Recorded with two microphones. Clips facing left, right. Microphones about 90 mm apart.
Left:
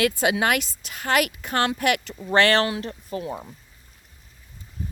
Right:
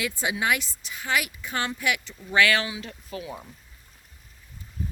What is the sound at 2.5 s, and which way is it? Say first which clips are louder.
Speech: left 7 dB; 55° left (ahead or behind).